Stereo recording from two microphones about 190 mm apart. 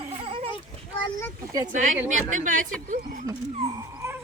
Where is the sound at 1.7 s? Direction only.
40° right (ahead or behind).